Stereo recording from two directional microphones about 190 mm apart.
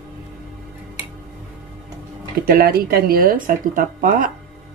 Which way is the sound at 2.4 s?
50° right (ahead or behind).